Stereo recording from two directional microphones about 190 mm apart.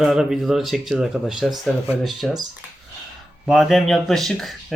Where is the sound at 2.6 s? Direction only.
10° right (ahead or behind).